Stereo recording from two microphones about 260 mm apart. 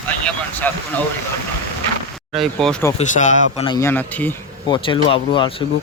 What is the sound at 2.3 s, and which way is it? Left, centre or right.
Speech, centre.